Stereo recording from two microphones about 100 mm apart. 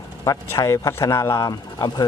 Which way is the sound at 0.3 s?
30° left (ahead or behind).